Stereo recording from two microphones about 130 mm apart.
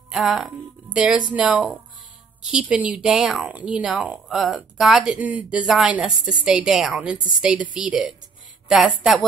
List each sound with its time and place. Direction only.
0.1 s speech: centre (ahead or behind)